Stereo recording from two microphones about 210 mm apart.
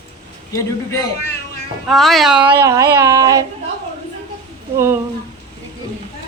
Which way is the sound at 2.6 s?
15° right (ahead or behind).